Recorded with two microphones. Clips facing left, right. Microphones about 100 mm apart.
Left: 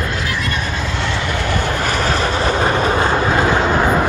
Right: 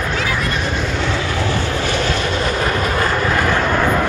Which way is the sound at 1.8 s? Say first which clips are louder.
Left 1 dB; 40° left (ahead or behind).